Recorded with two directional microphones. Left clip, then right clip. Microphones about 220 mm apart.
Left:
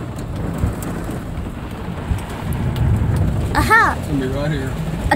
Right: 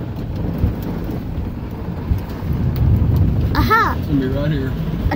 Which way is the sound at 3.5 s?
Centre (ahead or behind).